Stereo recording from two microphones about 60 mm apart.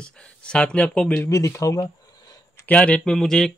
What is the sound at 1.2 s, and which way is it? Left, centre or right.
Speech, left.